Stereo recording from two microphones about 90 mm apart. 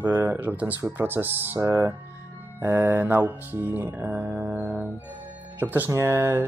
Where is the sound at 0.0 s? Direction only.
20° right (ahead or behind).